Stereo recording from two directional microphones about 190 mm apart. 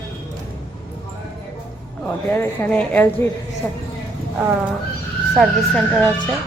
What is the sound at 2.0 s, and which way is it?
Speech, 10° left (ahead or behind).